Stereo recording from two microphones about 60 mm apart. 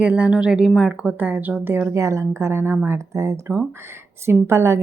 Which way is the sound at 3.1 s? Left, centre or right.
Right.